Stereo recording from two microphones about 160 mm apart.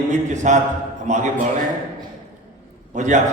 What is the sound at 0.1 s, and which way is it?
A man's voice, 50° right (ahead or behind).